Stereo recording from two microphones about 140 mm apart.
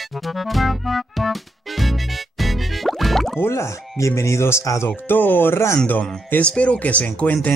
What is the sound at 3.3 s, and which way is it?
Speech, 20° left (ahead or behind).